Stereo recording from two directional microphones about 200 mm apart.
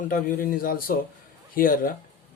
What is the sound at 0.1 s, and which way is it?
Speech, 45° left (ahead or behind).